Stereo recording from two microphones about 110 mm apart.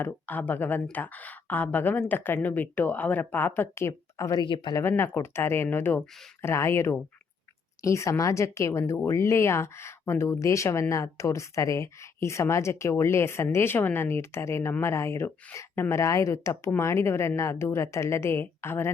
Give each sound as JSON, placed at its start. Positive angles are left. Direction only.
{"t": 0.0, "sound": "speech", "side_deg": 15}
{"t": 4.4, "sound": "speech", "side_deg": 50}
{"t": 4.8, "sound": "speech", "side_deg": 20}